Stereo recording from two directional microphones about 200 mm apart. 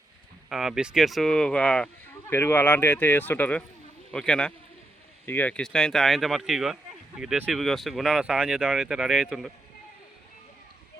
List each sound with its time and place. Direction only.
0.5 s speech: centre (ahead or behind)